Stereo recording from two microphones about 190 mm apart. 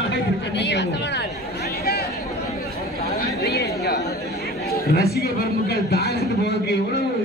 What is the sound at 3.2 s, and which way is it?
Chatter, 60° left (ahead or behind).